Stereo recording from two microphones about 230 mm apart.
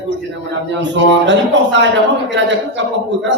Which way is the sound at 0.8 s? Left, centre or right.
Right.